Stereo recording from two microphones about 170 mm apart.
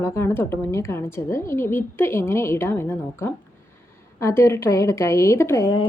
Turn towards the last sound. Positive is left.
turn(degrees=20)  # may be behind; listen again after turning